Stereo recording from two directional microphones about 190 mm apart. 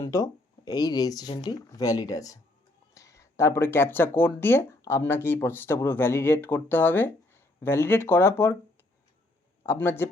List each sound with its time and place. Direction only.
0.0 s speech: 20° left (ahead or behind)
9.6 s speech: 10° left (ahead or behind)